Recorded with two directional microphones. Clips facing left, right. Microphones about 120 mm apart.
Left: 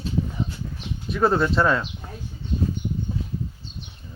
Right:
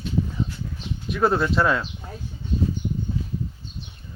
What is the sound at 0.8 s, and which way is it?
Dog, centre (ahead or behind).